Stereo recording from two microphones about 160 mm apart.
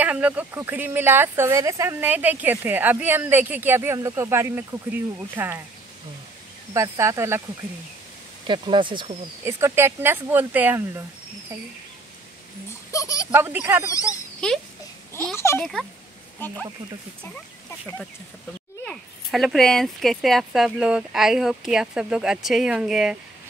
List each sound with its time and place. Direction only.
0.0 s speech: 10° right (ahead or behind)
6.7 s speech: 20° right (ahead or behind)
8.5 s speech: 30° right (ahead or behind)
9.4 s speech: 15° right (ahead or behind)
12.9 s speech: 20° left (ahead or behind)
13.3 s speech: 15° right (ahead or behind)
14.4 s speech: 5° left (ahead or behind)
15.3 s speech: 15° left (ahead or behind); by 23.1 s 5° right (ahead or behind)